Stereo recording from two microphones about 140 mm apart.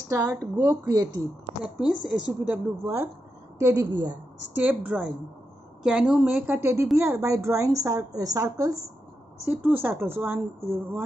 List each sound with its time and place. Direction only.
0.1 s a woman's voice: 25° right (ahead or behind)
2.4 s a woman's voice: 20° right (ahead or behind)
4.6 s a woman's voice: 10° right (ahead or behind)
9.5 s a woman's voice: 15° right (ahead or behind)